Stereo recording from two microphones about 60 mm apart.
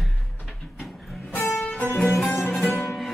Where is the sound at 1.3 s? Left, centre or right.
Left.